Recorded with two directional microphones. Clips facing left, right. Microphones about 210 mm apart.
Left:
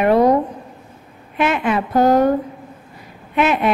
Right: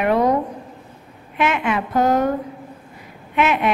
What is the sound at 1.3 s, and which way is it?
Speech, 35° left (ahead or behind).